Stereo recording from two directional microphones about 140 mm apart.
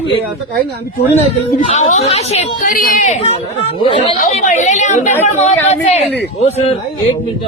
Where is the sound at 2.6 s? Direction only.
80° left; by 3.2 s 60° left (ahead or behind).